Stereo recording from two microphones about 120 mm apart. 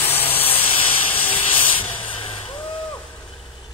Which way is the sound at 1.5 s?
50° left (ahead or behind).